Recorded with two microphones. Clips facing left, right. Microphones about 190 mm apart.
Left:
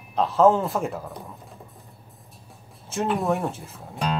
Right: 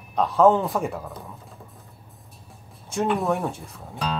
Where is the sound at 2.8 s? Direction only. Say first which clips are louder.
Right 1 dB; 5° left (ahead or behind).